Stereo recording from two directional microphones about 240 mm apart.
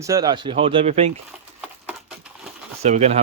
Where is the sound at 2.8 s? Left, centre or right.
Right.